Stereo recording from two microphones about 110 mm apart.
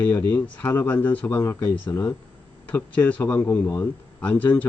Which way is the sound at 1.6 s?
45° left (ahead or behind).